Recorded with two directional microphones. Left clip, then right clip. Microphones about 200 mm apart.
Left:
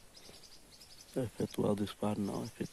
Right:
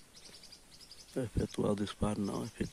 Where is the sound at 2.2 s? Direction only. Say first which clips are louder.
Right 1 dB; 15° right (ahead or behind).